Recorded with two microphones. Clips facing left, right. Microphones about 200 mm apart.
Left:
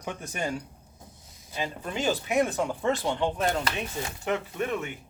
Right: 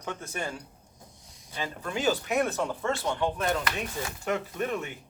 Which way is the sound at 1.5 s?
20° left (ahead or behind).